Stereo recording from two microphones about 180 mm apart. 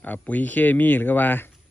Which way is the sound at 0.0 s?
10° left (ahead or behind).